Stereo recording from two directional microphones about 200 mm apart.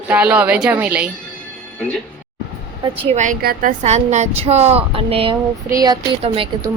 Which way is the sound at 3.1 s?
40° right (ahead or behind).